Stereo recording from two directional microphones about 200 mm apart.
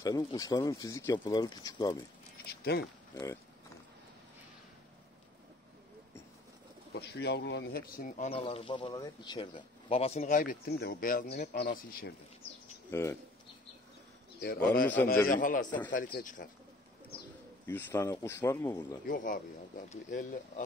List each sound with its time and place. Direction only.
0.0 s speech: 20° left (ahead or behind)
2.4 s a sound: 55° left (ahead or behind)
6.9 s speech: 55° left (ahead or behind)
8.3 s speech: 30° left (ahead or behind)
10.2 s speech: 45° left (ahead or behind)
12.9 s speech: 15° left (ahead or behind)
14.4 s speech: 50° left (ahead or behind)
17.6 s speech: 10° left (ahead or behind)
19.0 s speech: 40° left (ahead or behind)